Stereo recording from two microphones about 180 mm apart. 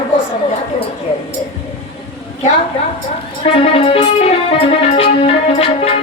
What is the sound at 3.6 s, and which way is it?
Music, 35° left (ahead or behind).